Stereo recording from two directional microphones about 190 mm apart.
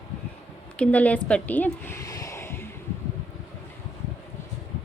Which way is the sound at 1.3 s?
5° left (ahead or behind).